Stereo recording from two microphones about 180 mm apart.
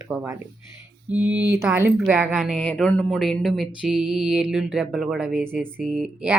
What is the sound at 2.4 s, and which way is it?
A woman's voice, 5° left (ahead or behind).